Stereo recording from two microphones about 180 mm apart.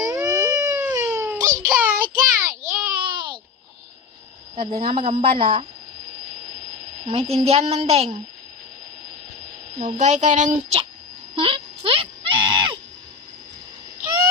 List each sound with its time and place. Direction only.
0.0 s a sound: 20° right (ahead or behind)
2.2 s child singing: 20° right (ahead or behind)
3.1 s babbling: 25° right (ahead or behind)
4.5 s a woman's voice: 30° right (ahead or behind)
7.0 s a woman's voice: 35° right (ahead or behind)
9.7 s a woman's voice: 40° right (ahead or behind)
11.3 s a sound: 30° right (ahead or behind)